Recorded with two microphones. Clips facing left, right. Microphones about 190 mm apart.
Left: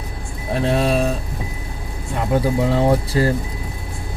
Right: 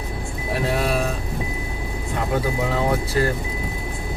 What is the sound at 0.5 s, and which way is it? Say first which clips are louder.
Speech: left 4 dB; 25° left (ahead or behind).